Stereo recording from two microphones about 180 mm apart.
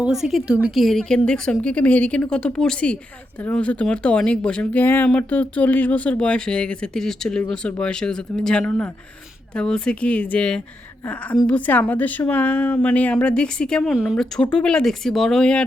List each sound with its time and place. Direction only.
0.0 s a woman's voice: centre (ahead or behind)